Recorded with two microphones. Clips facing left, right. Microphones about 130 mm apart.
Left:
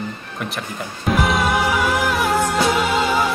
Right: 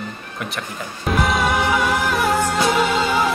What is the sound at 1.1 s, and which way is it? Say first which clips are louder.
Music: left 1 dB; centre (ahead or behind).